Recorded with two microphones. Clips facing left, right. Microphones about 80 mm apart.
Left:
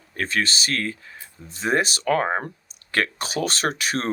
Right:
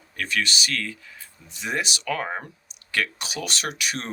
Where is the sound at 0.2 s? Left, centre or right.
Left.